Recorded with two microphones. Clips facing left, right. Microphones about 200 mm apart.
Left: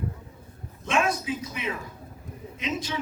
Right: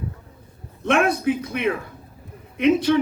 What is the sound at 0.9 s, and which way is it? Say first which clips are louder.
Speech: right 7 dB; 60° right (ahead or behind).